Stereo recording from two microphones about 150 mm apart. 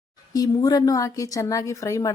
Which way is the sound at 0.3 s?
25° left (ahead or behind).